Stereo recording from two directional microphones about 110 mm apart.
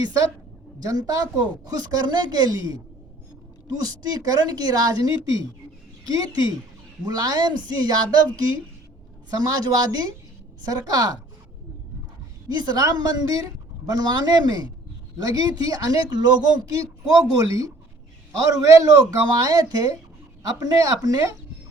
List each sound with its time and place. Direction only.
0.9 s speech: 35° right (ahead or behind)
9.3 s speech: 40° right (ahead or behind)
12.5 s speech: 40° right (ahead or behind)